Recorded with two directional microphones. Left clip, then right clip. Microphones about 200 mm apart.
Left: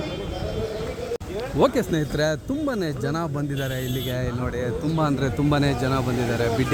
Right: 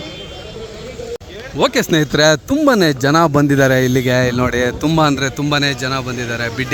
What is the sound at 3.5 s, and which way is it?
A man's voice, 45° right (ahead or behind).